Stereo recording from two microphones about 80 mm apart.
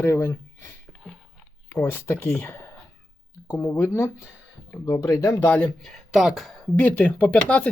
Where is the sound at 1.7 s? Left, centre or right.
Left.